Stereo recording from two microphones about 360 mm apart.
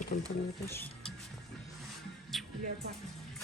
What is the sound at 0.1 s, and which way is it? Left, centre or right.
Speech, centre.